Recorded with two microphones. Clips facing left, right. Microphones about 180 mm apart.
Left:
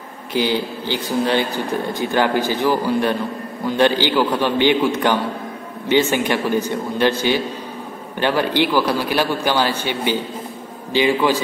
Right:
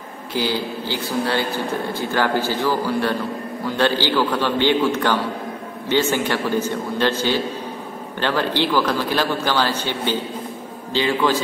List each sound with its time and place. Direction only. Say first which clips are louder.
0.3 s a man's voice: left 3 dB; 15° left (ahead or behind)